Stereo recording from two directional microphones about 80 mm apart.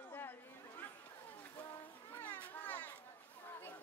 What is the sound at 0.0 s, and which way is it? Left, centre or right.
Chatter, left.